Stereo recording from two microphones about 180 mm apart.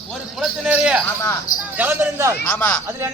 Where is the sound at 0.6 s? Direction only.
5° right (ahead or behind).